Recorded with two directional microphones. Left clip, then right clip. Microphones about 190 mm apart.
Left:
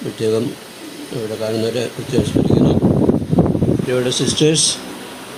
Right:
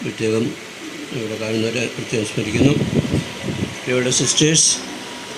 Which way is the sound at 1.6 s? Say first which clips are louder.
Left 1 dB; 30° left (ahead or behind).